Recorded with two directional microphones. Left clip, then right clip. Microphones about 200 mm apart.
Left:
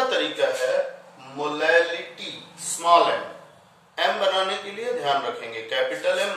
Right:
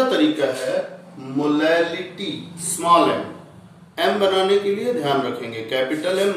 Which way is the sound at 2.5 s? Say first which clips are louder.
Right 1 dB; 20° right (ahead or behind).